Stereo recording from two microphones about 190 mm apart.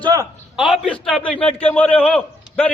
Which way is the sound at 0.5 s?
Centre (ahead or behind).